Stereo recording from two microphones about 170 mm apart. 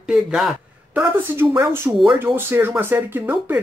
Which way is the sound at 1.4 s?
15° right (ahead or behind).